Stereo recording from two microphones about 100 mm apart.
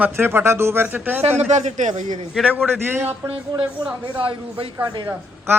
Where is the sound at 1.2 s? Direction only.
90° right.